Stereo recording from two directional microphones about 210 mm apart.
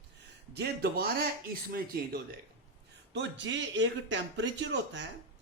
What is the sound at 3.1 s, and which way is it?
Speech, 60° right (ahead or behind).